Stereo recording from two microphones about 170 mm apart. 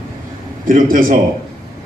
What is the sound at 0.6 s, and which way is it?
Speech, 55° right (ahead or behind).